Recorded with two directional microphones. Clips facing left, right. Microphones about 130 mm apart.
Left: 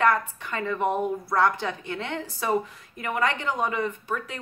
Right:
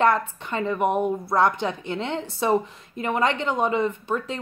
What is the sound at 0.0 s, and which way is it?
A woman's voice, 25° right (ahead or behind).